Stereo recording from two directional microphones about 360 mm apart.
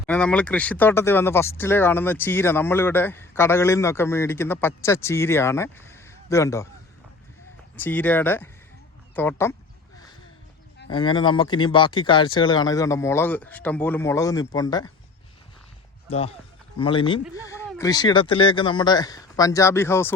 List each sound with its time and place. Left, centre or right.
0.1 s speech: centre
7.8 s speech: centre
10.9 s speech: centre
16.0 s speech: centre